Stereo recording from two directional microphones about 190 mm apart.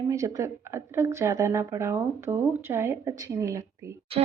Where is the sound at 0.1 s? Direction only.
15° right (ahead or behind).